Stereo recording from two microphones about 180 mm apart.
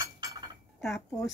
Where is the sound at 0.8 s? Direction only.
Centre (ahead or behind).